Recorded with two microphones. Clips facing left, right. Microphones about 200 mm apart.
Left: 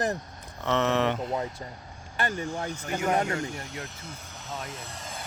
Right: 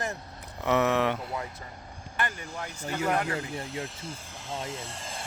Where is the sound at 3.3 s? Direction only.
30° right (ahead or behind).